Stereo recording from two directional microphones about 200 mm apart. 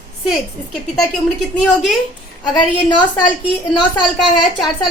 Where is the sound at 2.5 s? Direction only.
20° left (ahead or behind).